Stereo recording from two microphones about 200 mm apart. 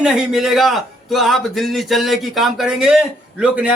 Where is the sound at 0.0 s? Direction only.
Centre (ahead or behind).